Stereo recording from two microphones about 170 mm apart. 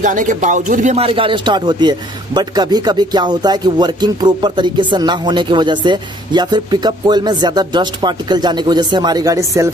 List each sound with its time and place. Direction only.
0.0 s speech: 50° right (ahead or behind)
0.9 s a man's voice: 35° right (ahead or behind)